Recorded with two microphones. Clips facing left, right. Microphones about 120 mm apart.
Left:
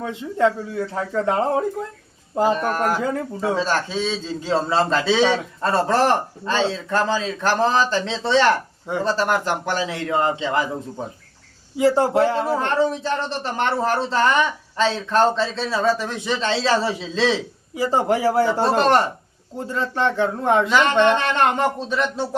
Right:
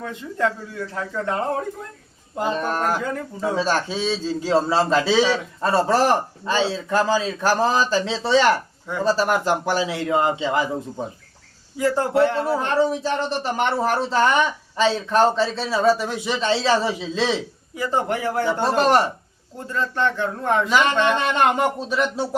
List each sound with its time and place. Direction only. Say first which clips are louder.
0.3 s speech: left 4 dB; 30° left (ahead or behind)
2.6 s speech: left 1 dB; 20° right (ahead or behind)
3.0 s speech: left 2 dB; 25° left (ahead or behind)
3.5 s speech: even; 15° right (ahead or behind)
11.8 s speech: left 2 dB; 25° left (ahead or behind)
12.5 s speech: even; 10° right (ahead or behind)
17.7 s speech: left 3 dB; 30° left (ahead or behind)
20.7 s speech: left 1 dB; 10° right (ahead or behind)
20.9 s speech: left 3 dB; 25° left (ahead or behind)
21.2 s speech: even; 10° right (ahead or behind)